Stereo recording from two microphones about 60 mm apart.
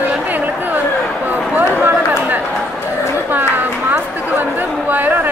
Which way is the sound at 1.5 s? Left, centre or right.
Right.